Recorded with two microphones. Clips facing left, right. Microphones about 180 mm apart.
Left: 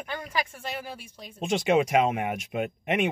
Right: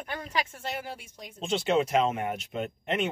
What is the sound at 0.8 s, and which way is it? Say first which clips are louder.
Speech: even; 20° right (ahead or behind).